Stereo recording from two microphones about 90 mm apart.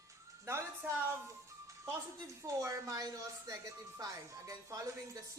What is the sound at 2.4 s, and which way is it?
Speech, 40° right (ahead or behind).